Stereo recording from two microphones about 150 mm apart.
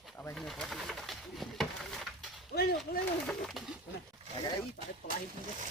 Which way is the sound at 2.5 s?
90° left.